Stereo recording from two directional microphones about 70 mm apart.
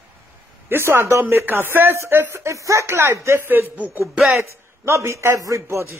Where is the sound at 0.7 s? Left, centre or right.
Right.